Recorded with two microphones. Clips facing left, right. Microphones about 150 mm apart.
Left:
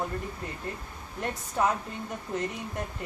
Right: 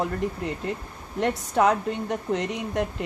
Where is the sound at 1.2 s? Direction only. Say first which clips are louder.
Right 7 dB; 80° right.